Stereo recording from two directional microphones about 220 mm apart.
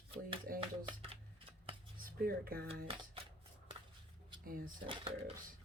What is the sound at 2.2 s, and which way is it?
Speech, 45° right (ahead or behind).